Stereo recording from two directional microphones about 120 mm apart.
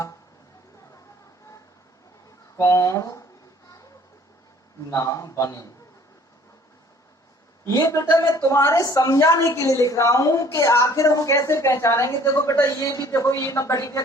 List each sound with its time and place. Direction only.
2.6 s a woman's voice: 25° left (ahead or behind)
4.9 s a woman's voice: 30° left (ahead or behind)
7.7 s a woman's voice: 25° left (ahead or behind)